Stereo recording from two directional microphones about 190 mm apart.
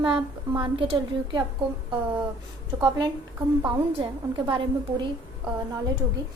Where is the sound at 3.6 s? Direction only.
20° right (ahead or behind).